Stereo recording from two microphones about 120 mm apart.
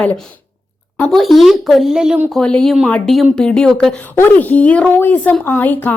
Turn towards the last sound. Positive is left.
turn(degrees=15)  # may be behind; listen again after turning